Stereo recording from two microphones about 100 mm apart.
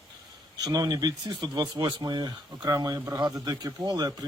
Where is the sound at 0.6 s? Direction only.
40° right (ahead or behind).